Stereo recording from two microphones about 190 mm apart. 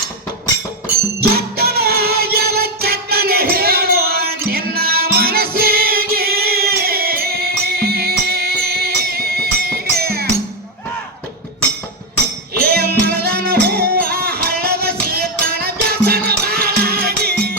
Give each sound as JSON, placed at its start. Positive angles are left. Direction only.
{"t": 1.2, "sound": "music", "side_deg": -55}
{"t": 12.5, "sound": "music", "side_deg": -55}